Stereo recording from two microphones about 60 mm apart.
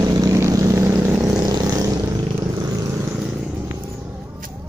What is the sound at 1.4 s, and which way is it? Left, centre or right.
Vehicle, right.